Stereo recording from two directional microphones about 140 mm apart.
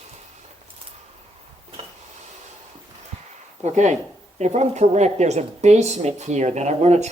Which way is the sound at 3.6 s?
55° right (ahead or behind).